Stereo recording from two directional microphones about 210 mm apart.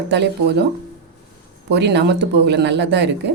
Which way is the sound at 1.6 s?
55° right (ahead or behind).